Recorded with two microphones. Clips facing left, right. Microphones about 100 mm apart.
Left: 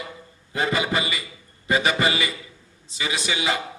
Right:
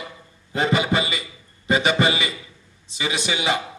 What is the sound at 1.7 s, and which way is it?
Music, 20° right (ahead or behind).